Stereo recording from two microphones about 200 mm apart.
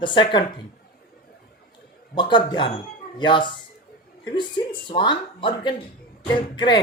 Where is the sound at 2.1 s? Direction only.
25° left (ahead or behind).